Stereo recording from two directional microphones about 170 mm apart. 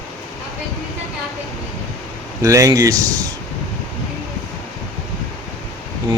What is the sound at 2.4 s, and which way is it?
Speech, 20° right (ahead or behind).